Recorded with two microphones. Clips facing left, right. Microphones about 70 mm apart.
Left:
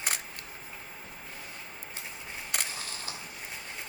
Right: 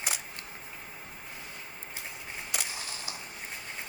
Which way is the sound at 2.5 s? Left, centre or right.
Left.